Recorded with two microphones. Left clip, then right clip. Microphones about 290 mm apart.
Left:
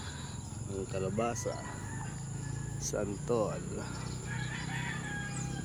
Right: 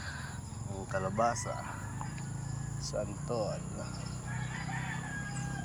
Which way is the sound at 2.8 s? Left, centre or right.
Centre.